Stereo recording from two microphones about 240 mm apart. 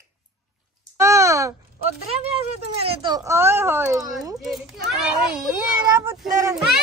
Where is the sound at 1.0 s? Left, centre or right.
Centre.